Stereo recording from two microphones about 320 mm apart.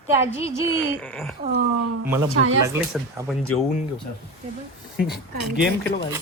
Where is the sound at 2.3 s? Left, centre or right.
Right.